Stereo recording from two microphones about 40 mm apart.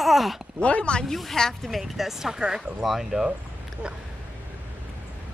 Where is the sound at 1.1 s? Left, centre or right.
Centre.